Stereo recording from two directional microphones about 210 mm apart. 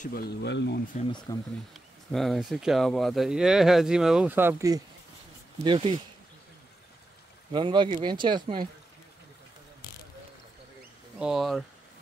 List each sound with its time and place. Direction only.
0.0 s speech: 45° left (ahead or behind)
0.9 s speech: 20° left (ahead or behind)
1.7 s speech: centre (ahead or behind); by 5.9 s 25° right (ahead or behind)
7.5 s speech: 20° right (ahead or behind)
11.1 s speech: centre (ahead or behind)